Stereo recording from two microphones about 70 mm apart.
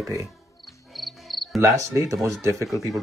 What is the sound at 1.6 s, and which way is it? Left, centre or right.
Speech, right.